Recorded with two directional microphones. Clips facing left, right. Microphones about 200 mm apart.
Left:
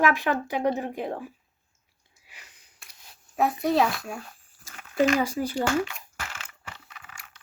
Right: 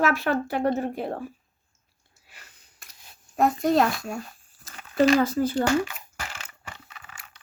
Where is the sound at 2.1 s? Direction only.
15° left (ahead or behind).